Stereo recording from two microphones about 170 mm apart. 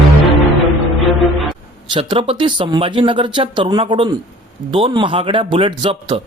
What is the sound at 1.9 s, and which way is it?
A man's voice, 30° right (ahead or behind).